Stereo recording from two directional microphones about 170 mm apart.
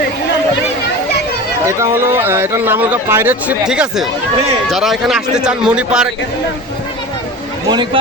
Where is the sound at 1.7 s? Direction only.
15° right (ahead or behind).